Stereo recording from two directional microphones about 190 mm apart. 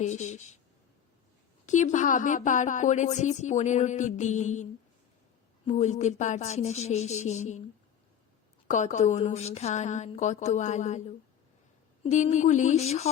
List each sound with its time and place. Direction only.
0.0 s speech: 40° left (ahead or behind)
1.6 s speech: 40° left (ahead or behind)
8.6 s speech: 40° left (ahead or behind)
12.0 s speech: 40° left (ahead or behind)